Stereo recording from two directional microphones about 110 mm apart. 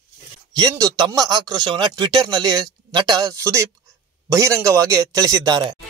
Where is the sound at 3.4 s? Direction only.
25° right (ahead or behind).